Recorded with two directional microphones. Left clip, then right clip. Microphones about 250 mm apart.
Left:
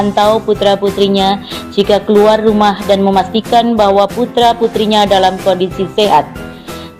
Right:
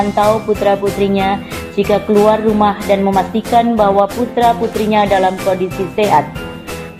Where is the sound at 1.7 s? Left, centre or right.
Left.